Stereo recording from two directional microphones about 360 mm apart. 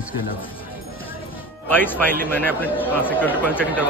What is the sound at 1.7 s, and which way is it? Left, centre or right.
A man's voice, centre.